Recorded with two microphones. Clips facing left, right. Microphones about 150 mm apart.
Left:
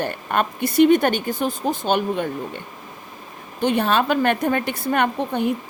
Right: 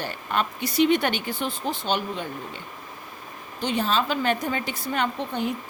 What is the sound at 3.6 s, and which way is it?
A woman's voice, 60° left (ahead or behind).